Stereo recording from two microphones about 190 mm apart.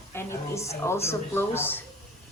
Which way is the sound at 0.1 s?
15° left (ahead or behind).